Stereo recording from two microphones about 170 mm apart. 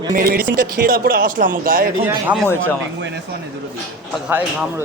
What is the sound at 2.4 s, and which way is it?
Speech, 15° left (ahead or behind).